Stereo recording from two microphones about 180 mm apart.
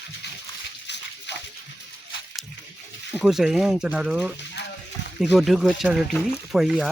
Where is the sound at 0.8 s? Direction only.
70° left (ahead or behind).